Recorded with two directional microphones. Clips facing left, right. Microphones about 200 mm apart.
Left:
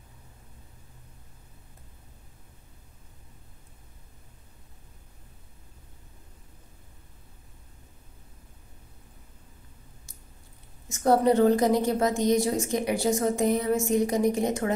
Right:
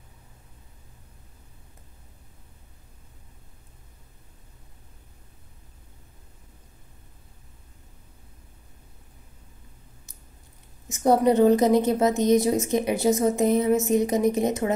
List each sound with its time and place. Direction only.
10.9 s a woman's voice: 20° right (ahead or behind)